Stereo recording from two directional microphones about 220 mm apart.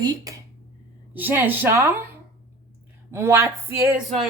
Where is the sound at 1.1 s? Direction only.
10° right (ahead or behind).